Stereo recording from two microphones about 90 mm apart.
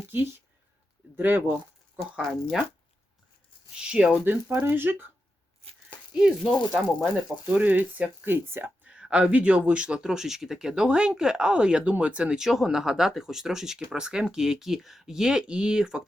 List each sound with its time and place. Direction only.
0.1 s speech: 20° right (ahead or behind)
2.0 s speech: 5° right (ahead or behind)
3.9 s speech: 15° right (ahead or behind)
6.1 s speech: 5° right (ahead or behind)
7.0 s speech: 20° right (ahead or behind)
8.9 s speech: 10° right (ahead or behind)